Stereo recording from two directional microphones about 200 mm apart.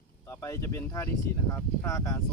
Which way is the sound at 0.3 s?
15° left (ahead or behind).